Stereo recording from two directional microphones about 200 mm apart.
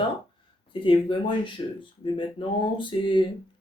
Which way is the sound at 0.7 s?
25° left (ahead or behind).